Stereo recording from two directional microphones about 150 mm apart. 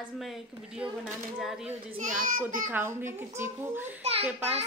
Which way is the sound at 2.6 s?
15° right (ahead or behind).